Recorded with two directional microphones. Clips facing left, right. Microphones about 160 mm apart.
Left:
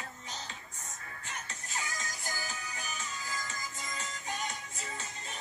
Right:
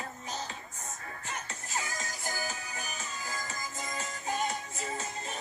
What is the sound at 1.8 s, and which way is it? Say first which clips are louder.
Music: right 2 dB; 35° right (ahead or behind).